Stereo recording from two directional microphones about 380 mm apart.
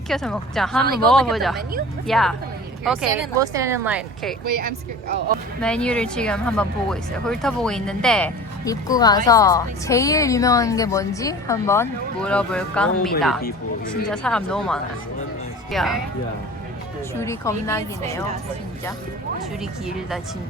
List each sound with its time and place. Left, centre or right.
0.1 s speech: centre
4.6 s speech: right
5.5 s speech: centre
17.2 s speech: centre